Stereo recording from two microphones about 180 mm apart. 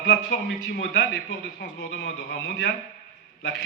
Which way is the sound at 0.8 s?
85° left.